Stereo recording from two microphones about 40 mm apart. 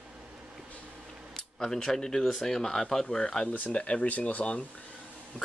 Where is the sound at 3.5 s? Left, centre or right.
Left.